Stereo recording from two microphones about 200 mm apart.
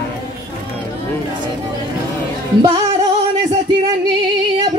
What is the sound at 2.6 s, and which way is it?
Music, 20° right (ahead or behind).